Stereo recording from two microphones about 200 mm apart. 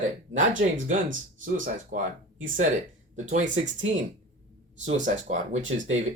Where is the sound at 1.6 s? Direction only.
40° right (ahead or behind).